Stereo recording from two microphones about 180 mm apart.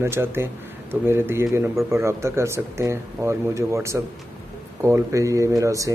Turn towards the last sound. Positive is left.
turn(degrees=-15)  # may be behind; listen again after turning